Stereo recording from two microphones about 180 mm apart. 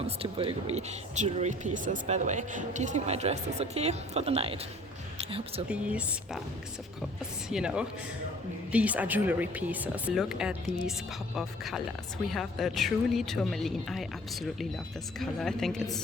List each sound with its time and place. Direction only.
0.2 s speech: 30° right (ahead or behind)
5.6 s speech: 5° right (ahead or behind)
7.5 s a woman's voice: 5° right (ahead or behind)
15.2 s a woman's voice: centre (ahead or behind)